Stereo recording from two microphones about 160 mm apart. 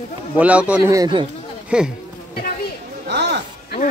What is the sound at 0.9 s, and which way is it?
Speech, 25° right (ahead or behind).